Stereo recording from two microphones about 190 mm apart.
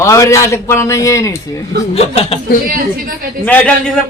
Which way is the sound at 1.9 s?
30° left (ahead or behind).